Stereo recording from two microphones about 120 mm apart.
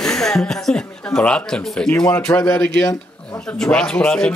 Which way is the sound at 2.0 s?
20° left (ahead or behind).